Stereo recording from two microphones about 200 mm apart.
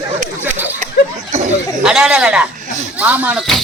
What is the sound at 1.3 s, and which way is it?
Chatter, 35° right (ahead or behind).